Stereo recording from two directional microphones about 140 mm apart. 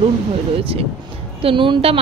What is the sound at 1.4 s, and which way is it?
Speech, 35° right (ahead or behind).